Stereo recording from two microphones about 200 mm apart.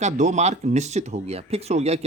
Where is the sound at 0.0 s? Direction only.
35° right (ahead or behind).